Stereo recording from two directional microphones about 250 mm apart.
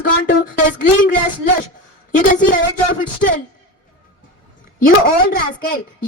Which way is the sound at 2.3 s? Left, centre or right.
Left.